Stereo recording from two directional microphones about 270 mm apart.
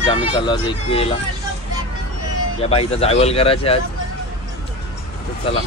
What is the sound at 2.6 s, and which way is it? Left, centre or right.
Speech, left.